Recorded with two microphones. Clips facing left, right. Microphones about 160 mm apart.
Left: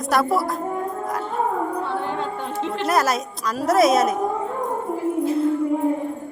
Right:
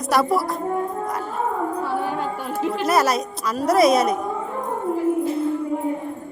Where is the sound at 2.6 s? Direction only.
5° right (ahead or behind).